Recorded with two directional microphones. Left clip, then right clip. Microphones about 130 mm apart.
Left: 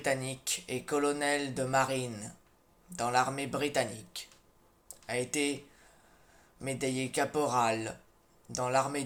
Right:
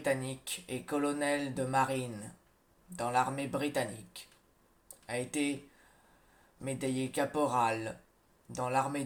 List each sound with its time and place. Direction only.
0.0 s speech: 50° left (ahead or behind)
5.0 s speech: 45° left (ahead or behind)
6.6 s speech: 50° left (ahead or behind)